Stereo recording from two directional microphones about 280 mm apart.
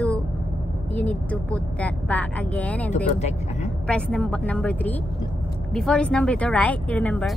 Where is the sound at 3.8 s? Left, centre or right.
Centre.